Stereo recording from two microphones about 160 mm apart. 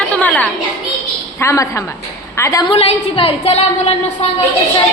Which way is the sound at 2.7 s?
40° left (ahead or behind).